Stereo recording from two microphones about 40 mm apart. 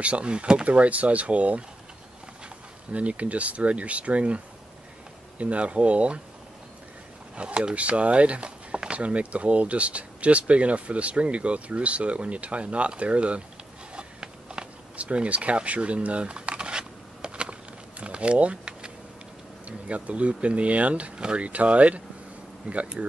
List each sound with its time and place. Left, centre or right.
0.0 s speech: right
0.7 s speech: right
2.9 s speech: right
5.4 s speech: right
7.3 s speech: right
13.9 s a sound: right
15.0 s a sound: right
19.9 s speech: right